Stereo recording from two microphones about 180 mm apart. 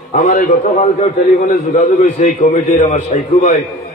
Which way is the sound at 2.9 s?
40° left (ahead or behind).